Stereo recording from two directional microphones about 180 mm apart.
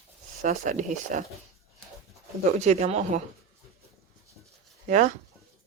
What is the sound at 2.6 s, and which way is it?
Speech, 40° right (ahead or behind).